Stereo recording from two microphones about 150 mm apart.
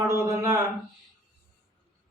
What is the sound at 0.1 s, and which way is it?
Speech, 20° right (ahead or behind).